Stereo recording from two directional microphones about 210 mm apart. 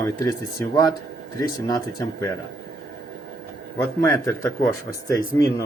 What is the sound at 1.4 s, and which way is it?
Speech, 20° left (ahead or behind).